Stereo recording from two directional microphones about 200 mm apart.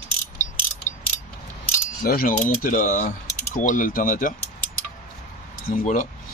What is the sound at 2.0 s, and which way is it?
A man's voice, 45° left (ahead or behind).